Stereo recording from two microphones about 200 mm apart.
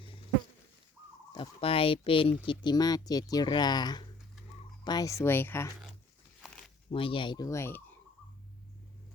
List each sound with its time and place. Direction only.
1.3 s speech: 25° left (ahead or behind); by 5.7 s 10° left (ahead or behind)
6.4 s a sound: 5° left (ahead or behind)
6.9 s speech: 25° left (ahead or behind)